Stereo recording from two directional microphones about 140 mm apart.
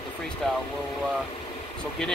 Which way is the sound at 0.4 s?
5° left (ahead or behind).